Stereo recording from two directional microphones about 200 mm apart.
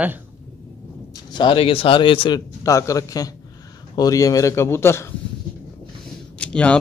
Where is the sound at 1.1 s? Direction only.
20° left (ahead or behind).